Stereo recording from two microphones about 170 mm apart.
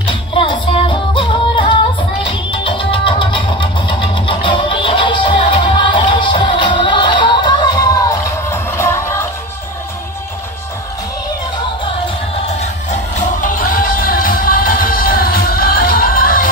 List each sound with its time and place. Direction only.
0.3 s music: 30° left (ahead or behind)
13.4 s music: 55° left (ahead or behind)